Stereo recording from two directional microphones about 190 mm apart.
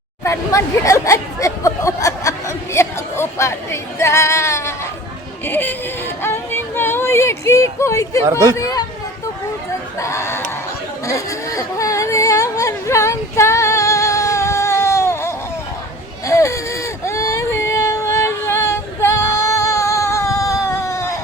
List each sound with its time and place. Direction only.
0.3 s speech: 15° left (ahead or behind)
6.2 s a sound: 10° left (ahead or behind)
8.3 s speech: 15° right (ahead or behind)
8.5 s speech: 20° left (ahead or behind)
10.0 s speech: 15° left (ahead or behind)
11.0 s a sound: 15° left (ahead or behind)
16.2 s baby cry: 15° left (ahead or behind)